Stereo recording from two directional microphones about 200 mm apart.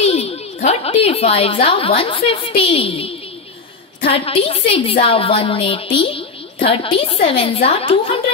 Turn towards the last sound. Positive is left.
turn(degrees=30)  # may be behind; listen again after turning